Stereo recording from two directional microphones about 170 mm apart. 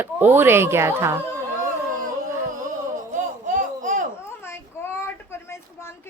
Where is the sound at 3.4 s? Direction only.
50° right (ahead or behind).